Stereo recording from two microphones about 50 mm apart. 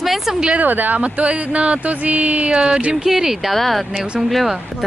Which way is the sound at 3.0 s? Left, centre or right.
Centre.